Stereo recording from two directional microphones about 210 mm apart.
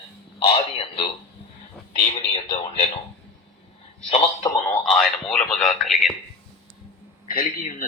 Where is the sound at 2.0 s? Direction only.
25° left (ahead or behind).